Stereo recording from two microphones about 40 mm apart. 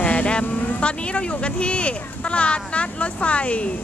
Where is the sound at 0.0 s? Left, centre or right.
Left.